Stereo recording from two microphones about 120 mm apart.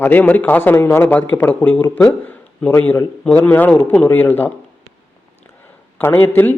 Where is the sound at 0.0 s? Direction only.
15° left (ahead or behind).